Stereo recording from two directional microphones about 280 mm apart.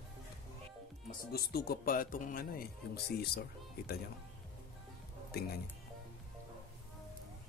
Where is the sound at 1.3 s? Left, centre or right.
Left.